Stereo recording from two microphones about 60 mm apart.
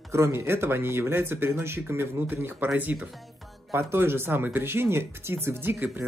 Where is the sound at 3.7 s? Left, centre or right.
Right.